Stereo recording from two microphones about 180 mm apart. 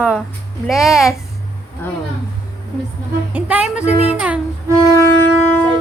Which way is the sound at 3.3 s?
5° right (ahead or behind).